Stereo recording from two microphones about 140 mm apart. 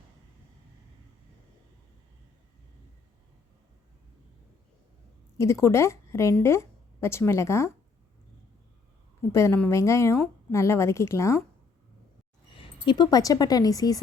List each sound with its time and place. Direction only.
5.4 s a woman's voice: 20° left (ahead or behind)
9.3 s a woman's voice: 20° left (ahead or behind)
12.5 s speech: 35° left (ahead or behind)